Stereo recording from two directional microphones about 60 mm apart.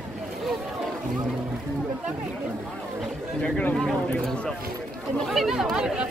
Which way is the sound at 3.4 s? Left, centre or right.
Centre.